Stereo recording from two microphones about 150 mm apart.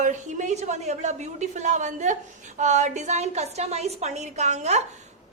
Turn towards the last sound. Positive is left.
turn(degrees=-50)  # may be behind; listen again after turning